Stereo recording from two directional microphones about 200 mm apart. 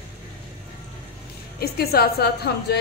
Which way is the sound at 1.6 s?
50° left (ahead or behind).